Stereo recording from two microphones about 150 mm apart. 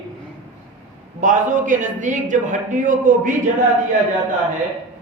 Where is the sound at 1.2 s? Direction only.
60° right (ahead or behind).